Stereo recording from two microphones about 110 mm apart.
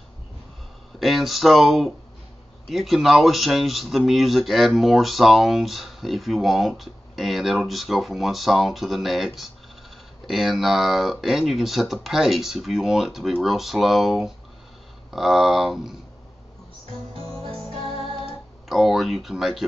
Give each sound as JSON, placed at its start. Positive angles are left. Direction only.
{"t": 0.9, "sound": "speech", "side_deg": 0}
{"t": 17.7, "sound": "music", "side_deg": 60}
{"t": 18.7, "sound": "speech", "side_deg": 0}